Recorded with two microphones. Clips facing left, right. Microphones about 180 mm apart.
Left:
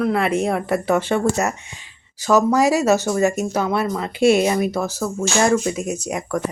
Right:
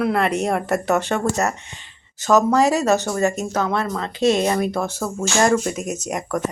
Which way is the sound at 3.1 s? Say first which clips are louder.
Left 2 dB; centre (ahead or behind).